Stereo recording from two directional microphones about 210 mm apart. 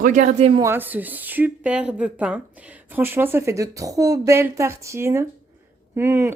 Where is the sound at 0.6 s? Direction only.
10° right (ahead or behind).